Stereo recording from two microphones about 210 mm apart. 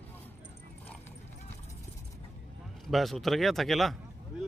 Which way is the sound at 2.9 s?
Centre (ahead or behind).